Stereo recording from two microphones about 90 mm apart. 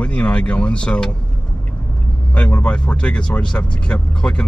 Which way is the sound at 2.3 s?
15° left (ahead or behind).